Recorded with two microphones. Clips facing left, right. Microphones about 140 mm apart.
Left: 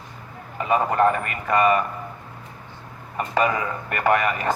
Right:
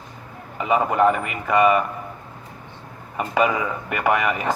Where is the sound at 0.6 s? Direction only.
15° right (ahead or behind).